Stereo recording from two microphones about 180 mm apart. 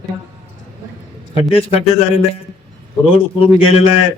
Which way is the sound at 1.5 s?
30° left (ahead or behind).